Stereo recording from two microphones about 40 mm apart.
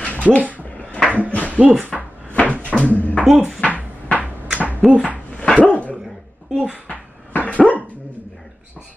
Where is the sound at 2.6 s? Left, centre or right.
Left.